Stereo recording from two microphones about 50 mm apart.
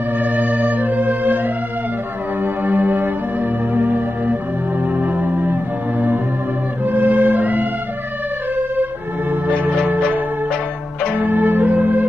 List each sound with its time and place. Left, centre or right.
0.2 s music: right
5.1 s music: right
6.8 s music: right
7.1 s music: right
9.5 s organ: right
11.1 s music: right